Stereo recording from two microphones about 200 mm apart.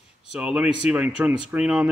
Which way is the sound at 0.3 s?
5° right (ahead or behind).